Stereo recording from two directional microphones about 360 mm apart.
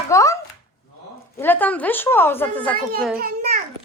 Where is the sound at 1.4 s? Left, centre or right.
Centre.